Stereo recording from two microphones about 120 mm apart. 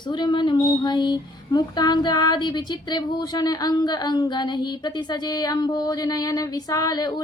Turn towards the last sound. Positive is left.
turn(degrees=35)  # may be behind; listen again after turning